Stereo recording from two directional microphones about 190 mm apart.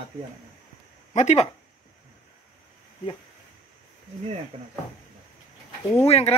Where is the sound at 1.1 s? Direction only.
35° left (ahead or behind).